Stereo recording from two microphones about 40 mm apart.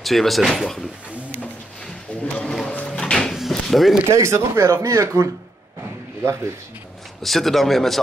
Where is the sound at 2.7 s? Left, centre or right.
Left.